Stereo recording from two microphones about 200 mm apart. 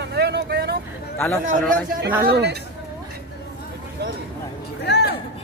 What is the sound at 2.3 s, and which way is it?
Speech, 55° right (ahead or behind).